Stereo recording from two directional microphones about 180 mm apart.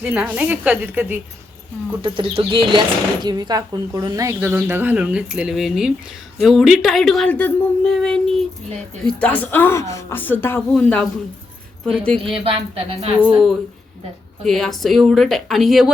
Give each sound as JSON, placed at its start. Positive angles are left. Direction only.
{"t": 0.0, "sound": "a woman's voice", "side_deg": -5}
{"t": 2.0, "sound": "a woman's voice", "side_deg": -30}
{"t": 12.3, "sound": "speech", "side_deg": -30}
{"t": 14.4, "sound": "speech", "side_deg": 0}